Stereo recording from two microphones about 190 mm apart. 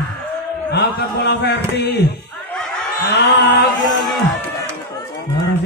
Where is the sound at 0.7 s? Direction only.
60° left (ahead or behind).